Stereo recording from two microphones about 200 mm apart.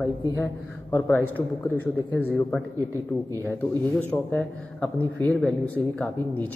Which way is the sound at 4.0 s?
5° left (ahead or behind).